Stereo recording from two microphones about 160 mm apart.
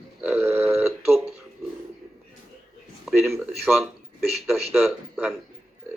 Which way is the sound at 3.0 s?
Centre (ahead or behind).